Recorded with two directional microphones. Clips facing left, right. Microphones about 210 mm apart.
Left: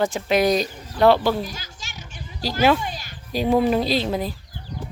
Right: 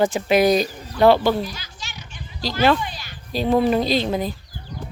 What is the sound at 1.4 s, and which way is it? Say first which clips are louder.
Children playing: right 2 dB; 45° left (ahead or behind).